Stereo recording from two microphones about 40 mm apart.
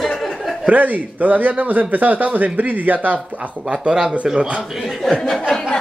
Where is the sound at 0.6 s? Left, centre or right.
Right.